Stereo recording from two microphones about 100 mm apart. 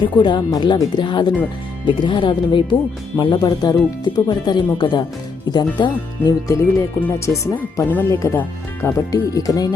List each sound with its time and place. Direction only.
0.0 s speech: 50° left (ahead or behind)
6.5 s speech: 30° left (ahead or behind)
7.9 s speech: 20° left (ahead or behind)
9.1 s speech: 35° left (ahead or behind)